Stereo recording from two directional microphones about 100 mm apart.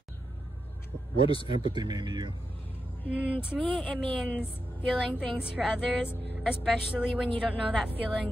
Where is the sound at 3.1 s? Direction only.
15° right (ahead or behind).